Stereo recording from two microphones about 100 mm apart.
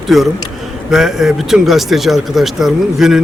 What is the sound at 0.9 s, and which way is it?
Speech, 5° right (ahead or behind).